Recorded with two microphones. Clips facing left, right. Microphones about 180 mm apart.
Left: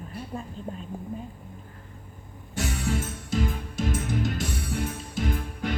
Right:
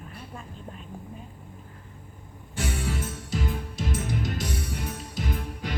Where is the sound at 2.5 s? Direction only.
45° left (ahead or behind).